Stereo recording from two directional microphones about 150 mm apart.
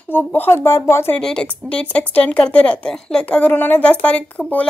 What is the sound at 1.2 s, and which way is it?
Speech, 5° left (ahead or behind).